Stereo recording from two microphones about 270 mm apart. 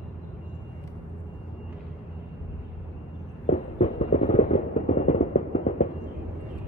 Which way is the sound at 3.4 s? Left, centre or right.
Left.